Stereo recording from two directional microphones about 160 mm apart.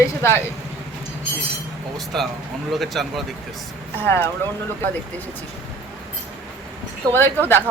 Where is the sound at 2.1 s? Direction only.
Centre (ahead or behind).